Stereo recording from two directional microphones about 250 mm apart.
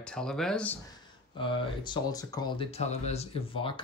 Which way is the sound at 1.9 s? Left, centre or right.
Centre.